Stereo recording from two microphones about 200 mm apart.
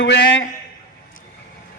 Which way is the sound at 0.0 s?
60° left (ahead or behind).